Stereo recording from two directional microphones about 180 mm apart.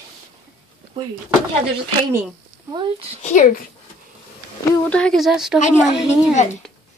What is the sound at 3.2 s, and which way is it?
Speech, 45° left (ahead or behind).